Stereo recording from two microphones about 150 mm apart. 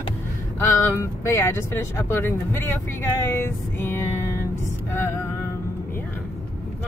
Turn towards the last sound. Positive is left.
turn(degrees=15)  # may be behind; listen again after turning